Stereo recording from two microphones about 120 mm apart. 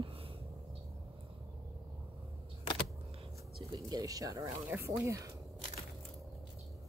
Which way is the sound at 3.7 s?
30° right (ahead or behind).